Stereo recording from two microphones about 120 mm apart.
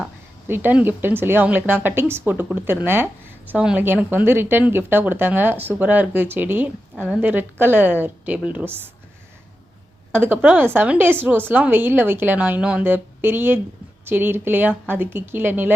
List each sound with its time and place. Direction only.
0.4 s a woman's voice: 15° right (ahead or behind)
10.1 s a woman's voice: 15° right (ahead or behind)